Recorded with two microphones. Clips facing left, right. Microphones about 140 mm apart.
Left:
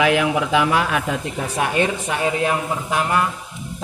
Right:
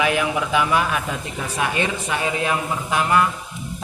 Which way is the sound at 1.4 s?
45° left (ahead or behind).